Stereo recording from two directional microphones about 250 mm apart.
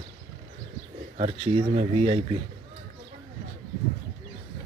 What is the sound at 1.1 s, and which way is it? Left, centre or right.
Speech, right.